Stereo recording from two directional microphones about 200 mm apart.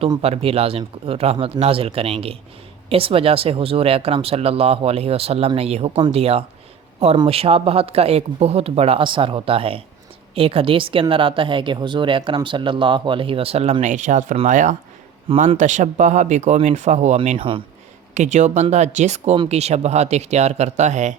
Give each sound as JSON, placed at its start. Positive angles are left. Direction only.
{"t": 0.0, "sound": "speech", "side_deg": -30}
{"t": 18.1, "sound": "speech", "side_deg": -35}